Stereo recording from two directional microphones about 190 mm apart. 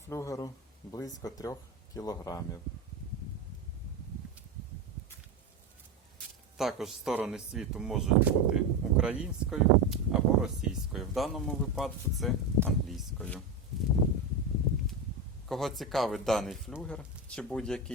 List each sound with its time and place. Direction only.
0.1 s speech: 15° left (ahead or behind)
6.6 s speech: centre (ahead or behind)
12.6 s a sound: 5° left (ahead or behind)
15.4 s speech: centre (ahead or behind)